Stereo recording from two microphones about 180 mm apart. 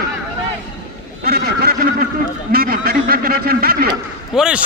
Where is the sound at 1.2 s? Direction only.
60° right (ahead or behind).